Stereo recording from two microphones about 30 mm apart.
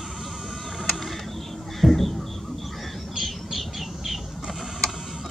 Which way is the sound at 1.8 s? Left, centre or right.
Centre.